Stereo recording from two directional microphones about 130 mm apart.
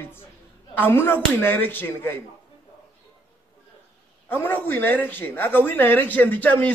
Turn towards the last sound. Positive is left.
turn(degrees=10)  # may be behind; listen again after turning